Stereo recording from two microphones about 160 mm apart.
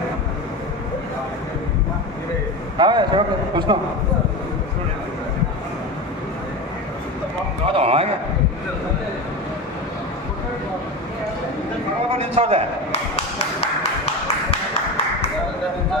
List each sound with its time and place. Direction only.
2.8 s a man's voice: 30° right (ahead or behind)
7.7 s a sound: 40° right (ahead or behind)
12.2 s a man's voice: 35° right (ahead or behind)